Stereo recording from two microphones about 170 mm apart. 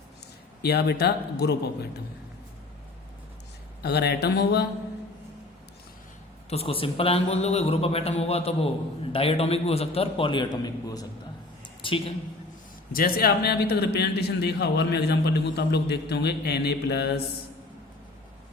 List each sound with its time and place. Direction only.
0.6 s a man's voice: 70° left (ahead or behind)
3.8 s a man's voice: 75° left (ahead or behind)
6.5 s a man's voice: 35° left (ahead or behind)
12.9 s a man's voice: 60° left (ahead or behind)